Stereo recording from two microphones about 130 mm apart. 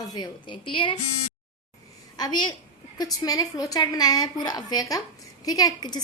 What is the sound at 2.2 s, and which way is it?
A woman's voice, 35° left (ahead or behind).